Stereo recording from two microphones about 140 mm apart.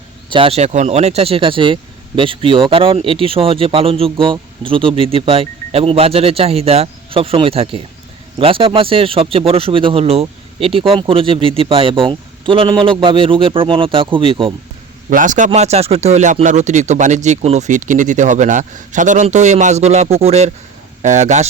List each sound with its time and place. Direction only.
0.3 s speech: 40° right (ahead or behind)
15.1 s speech: 65° right (ahead or behind)
15.5 s speech: 50° right (ahead or behind)